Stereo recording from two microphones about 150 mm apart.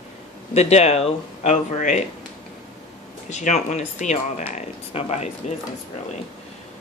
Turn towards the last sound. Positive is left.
turn(degrees=45)  # may be behind; listen again after turning